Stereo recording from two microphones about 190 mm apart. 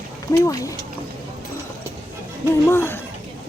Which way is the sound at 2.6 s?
10° left (ahead or behind).